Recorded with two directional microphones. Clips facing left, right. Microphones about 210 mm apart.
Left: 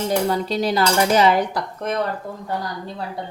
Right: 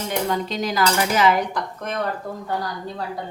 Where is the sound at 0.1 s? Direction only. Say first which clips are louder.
Left 2 dB; 35° left (ahead or behind).